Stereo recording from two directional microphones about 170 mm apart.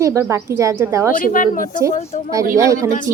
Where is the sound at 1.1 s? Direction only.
55° left (ahead or behind).